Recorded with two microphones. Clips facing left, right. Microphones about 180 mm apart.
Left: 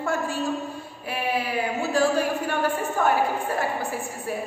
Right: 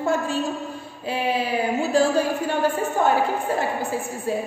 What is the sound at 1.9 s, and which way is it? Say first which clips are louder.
A woman's voice: right 2 dB; 25° right (ahead or behind).